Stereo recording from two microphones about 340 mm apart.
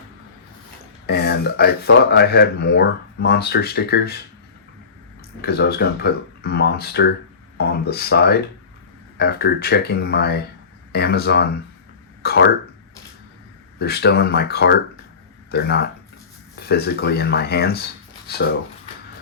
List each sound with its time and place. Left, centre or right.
1.0 s speech: left
5.4 s speech: left
13.7 s speech: left